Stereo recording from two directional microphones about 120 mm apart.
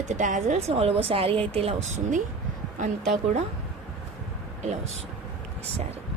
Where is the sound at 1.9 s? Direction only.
90° right.